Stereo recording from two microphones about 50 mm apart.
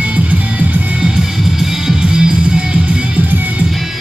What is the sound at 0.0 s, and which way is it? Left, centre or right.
Music, right.